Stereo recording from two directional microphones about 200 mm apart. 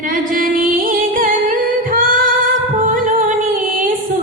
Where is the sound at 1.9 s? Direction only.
45° right (ahead or behind).